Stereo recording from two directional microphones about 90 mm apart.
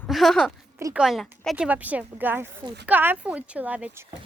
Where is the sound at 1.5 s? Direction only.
15° right (ahead or behind).